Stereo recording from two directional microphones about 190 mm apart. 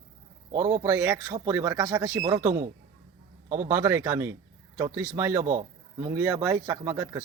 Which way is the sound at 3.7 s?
15° right (ahead or behind).